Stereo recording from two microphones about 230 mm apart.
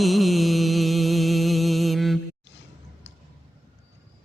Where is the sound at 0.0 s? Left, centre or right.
Centre.